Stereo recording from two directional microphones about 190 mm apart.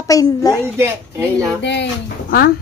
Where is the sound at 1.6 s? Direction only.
65° left (ahead or behind).